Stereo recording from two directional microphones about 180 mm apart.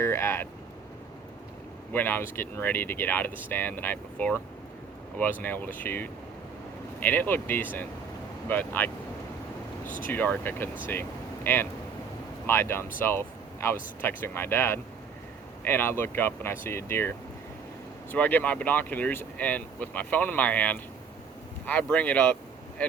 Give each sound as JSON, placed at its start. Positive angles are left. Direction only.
{"t": 0.0, "sound": "speech", "side_deg": 15}
{"t": 1.9, "sound": "speech", "side_deg": 10}
{"t": 9.8, "sound": "speech", "side_deg": 45}
{"t": 10.1, "sound": "speech", "side_deg": 10}